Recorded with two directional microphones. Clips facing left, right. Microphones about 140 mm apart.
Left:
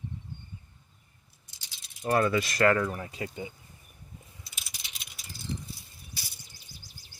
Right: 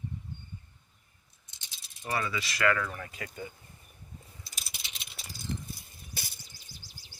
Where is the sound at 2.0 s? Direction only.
50° left (ahead or behind).